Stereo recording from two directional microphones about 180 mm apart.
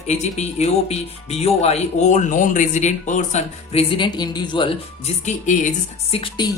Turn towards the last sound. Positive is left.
turn(degrees=25)  # may be behind; listen again after turning